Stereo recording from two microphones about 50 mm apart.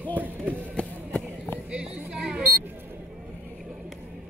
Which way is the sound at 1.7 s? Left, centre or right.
Centre.